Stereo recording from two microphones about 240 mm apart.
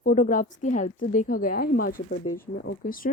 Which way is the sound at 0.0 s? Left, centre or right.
Left.